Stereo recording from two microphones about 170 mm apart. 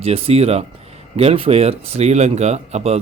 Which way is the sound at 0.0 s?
35° right (ahead or behind).